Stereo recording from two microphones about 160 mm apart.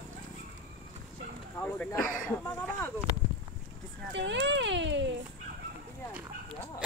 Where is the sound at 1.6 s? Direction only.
10° left (ahead or behind).